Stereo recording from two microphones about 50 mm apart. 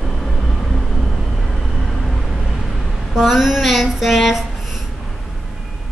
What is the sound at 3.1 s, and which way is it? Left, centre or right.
Speech, centre.